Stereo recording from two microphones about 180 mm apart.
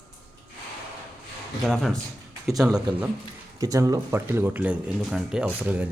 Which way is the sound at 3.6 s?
20° right (ahead or behind).